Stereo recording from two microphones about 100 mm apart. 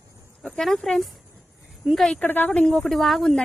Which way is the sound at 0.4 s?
5° left (ahead or behind).